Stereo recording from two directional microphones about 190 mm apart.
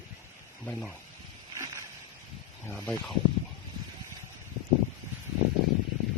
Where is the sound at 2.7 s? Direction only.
10° left (ahead or behind).